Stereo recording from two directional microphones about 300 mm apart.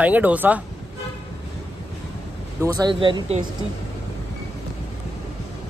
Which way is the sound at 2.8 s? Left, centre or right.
Centre.